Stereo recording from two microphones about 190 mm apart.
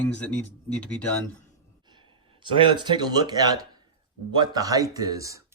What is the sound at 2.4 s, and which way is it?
Speech, 25° right (ahead or behind).